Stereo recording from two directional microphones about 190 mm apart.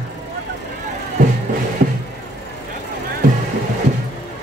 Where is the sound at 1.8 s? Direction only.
45° right (ahead or behind).